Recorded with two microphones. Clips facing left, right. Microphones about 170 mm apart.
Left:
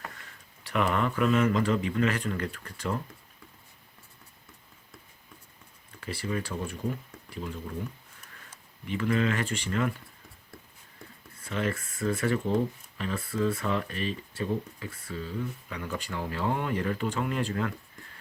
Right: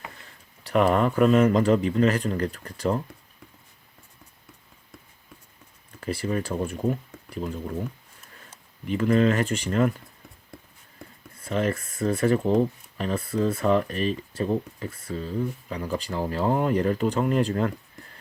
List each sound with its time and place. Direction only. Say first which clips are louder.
0.2 s speech: right 2 dB; 35° right (ahead or behind)
6.0 s speech: right 5 dB; 45° right (ahead or behind)
8.9 s speech: right 6 dB; 40° right (ahead or behind)
11.4 s speech: right 5 dB; 35° right (ahead or behind)